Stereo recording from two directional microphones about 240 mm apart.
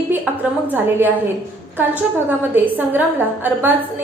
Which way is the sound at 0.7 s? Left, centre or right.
Centre.